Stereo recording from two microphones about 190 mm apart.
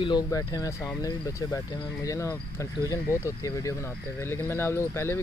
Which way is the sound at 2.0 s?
15° left (ahead or behind).